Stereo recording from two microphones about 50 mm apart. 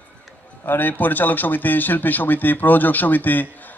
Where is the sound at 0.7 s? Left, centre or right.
Left.